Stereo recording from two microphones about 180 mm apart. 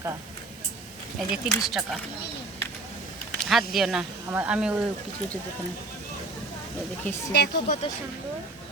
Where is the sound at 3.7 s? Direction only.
Centre (ahead or behind).